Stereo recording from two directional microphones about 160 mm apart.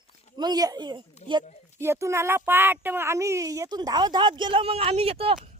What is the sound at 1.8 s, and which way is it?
Speech, 15° right (ahead or behind).